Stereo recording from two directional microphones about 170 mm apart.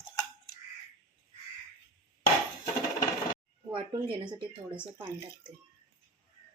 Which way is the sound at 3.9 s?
25° right (ahead or behind).